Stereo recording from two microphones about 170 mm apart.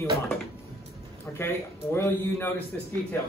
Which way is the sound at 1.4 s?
15° left (ahead or behind).